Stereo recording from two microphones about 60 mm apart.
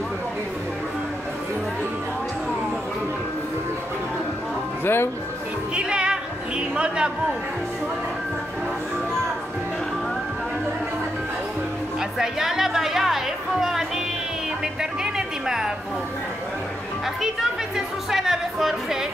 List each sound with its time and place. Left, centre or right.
4.8 s speech: left
5.8 s music: centre
12.0 s music: centre
17.0 s music: centre